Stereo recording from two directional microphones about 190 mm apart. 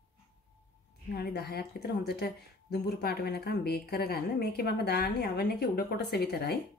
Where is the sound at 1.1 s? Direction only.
55° left (ahead or behind).